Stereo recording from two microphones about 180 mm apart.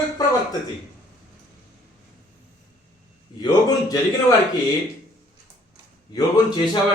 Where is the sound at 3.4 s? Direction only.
20° left (ahead or behind).